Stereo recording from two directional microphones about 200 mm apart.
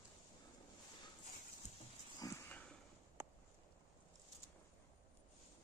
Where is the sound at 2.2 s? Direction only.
10° left (ahead or behind).